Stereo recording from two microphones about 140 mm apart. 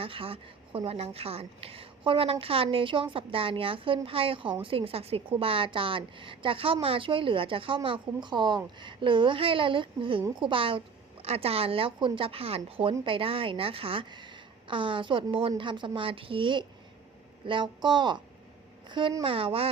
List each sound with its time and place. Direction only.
0.0 s a woman's voice: 40° right (ahead or behind)